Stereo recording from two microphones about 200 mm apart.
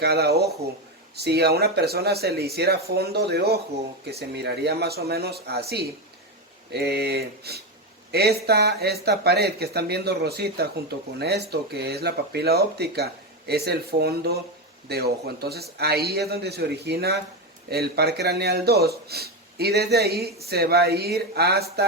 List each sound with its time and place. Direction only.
0.0 s a man's voice: 55° right (ahead or behind)